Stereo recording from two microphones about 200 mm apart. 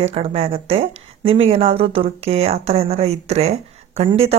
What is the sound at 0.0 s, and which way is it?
A woman's voice, 30° right (ahead or behind).